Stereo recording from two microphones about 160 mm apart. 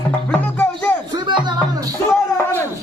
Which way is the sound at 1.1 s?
30° right (ahead or behind).